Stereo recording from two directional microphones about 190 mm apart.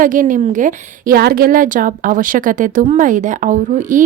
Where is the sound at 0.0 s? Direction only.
45° right (ahead or behind).